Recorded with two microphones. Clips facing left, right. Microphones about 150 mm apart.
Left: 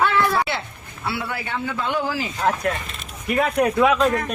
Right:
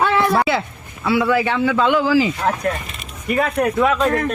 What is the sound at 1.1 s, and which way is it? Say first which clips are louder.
A man's voice: right 13 dB; 90° right.